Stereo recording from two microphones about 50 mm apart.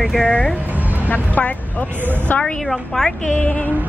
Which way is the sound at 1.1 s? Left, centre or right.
Left.